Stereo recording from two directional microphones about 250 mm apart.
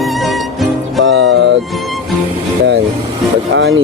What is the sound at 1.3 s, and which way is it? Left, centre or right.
Music, right.